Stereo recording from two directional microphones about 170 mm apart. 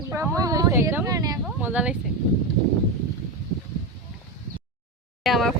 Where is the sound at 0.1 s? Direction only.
20° right (ahead or behind).